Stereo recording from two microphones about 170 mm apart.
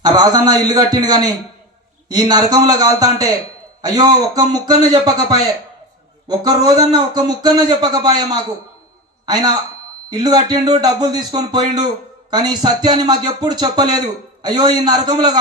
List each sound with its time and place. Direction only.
0.0 s a man's voice: 25° right (ahead or behind)